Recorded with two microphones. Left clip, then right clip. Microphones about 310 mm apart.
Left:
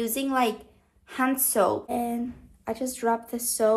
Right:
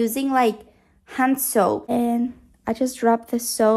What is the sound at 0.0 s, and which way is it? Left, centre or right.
A woman's voice, right.